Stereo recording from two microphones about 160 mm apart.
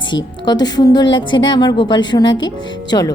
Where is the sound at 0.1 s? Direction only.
25° left (ahead or behind).